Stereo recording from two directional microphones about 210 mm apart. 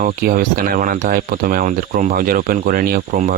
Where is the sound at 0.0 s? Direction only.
40° right (ahead or behind).